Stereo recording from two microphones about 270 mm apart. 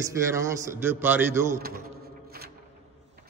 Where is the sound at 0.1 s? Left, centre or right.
Centre.